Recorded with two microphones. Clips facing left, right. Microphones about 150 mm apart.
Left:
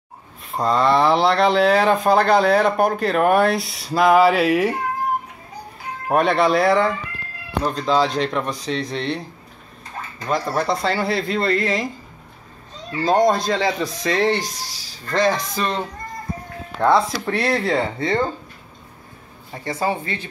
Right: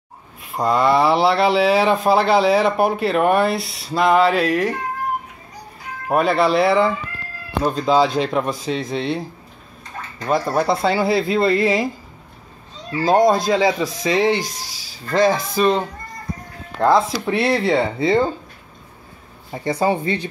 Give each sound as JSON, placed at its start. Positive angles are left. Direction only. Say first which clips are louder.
{"t": 0.5, "sound": "speech", "louder": "right 1 dB", "side_deg": -5}
{"t": 6.0, "sound": "speech", "louder": "even", "side_deg": 0}
{"t": 10.2, "sound": "speech", "louder": "right 3 dB", "side_deg": -10}
{"t": 12.9, "sound": "speech", "louder": "right 2 dB", "side_deg": 0}
{"t": 16.8, "sound": "speech", "louder": "right 1 dB", "side_deg": -5}
{"t": 19.5, "sound": "speech", "louder": "right 4 dB", "side_deg": -20}